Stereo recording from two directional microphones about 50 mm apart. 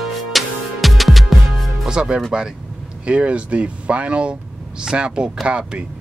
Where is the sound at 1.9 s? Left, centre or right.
Centre.